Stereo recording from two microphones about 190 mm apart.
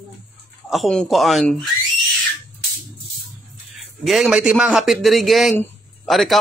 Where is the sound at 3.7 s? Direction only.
Centre (ahead or behind).